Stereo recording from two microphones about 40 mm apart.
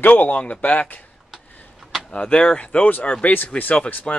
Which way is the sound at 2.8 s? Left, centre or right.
Left.